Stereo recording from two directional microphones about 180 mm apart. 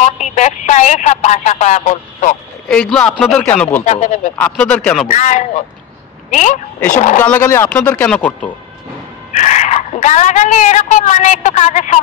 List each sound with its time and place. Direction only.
0.0 s a woman's voice: 40° left (ahead or behind)
2.7 s speech: 5° left (ahead or behind)
3.8 s a woman's voice: 40° left (ahead or behind)
4.4 s speech: 5° left (ahead or behind)
5.0 s a woman's voice: 40° left (ahead or behind)
7.2 s speech: 10° left (ahead or behind)
9.3 s a woman's voice: 40° left (ahead or behind)